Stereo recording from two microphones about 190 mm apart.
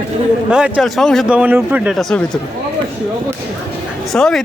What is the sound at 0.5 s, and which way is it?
Speech, centre (ahead or behind).